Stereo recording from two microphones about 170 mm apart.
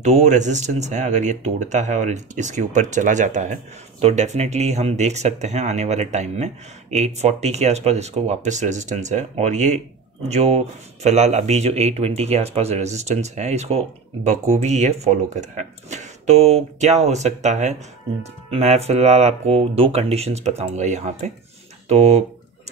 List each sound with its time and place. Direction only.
0.0 s speech: 40° right (ahead or behind)